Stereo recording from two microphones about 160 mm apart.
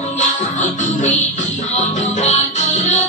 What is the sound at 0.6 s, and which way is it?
Music, 50° left (ahead or behind).